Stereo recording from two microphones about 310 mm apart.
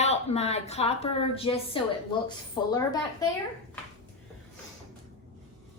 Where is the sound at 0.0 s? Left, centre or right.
Left.